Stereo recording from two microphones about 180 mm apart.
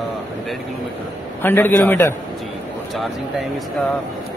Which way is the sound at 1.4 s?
10° left (ahead or behind).